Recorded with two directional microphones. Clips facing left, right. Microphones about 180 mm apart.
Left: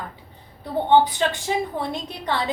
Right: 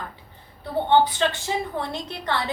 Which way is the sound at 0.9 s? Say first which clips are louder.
Left 2 dB; 15° left (ahead or behind).